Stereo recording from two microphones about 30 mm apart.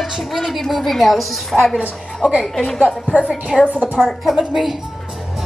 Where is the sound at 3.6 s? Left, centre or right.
Right.